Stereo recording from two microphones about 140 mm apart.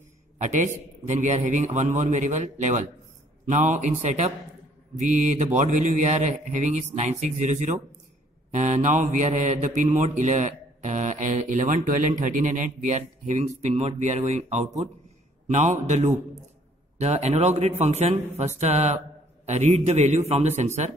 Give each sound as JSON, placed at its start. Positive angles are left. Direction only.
{"t": 0.4, "sound": "speech", "side_deg": -60}
{"t": 17.0, "sound": "a man's voice", "side_deg": -50}